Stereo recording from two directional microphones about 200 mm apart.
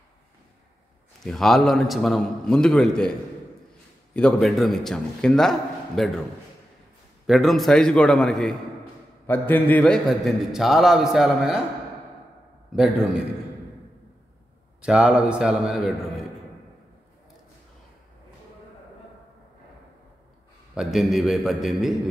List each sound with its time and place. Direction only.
1.2 s a man's voice: centre (ahead or behind)
7.2 s a man's voice: centre (ahead or behind)
12.7 s a man's voice: centre (ahead or behind)
14.8 s a man's voice: 5° right (ahead or behind)
20.7 s a man's voice: centre (ahead or behind)